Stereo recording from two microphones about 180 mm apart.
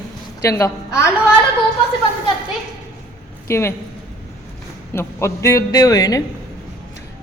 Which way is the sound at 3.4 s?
15° left (ahead or behind).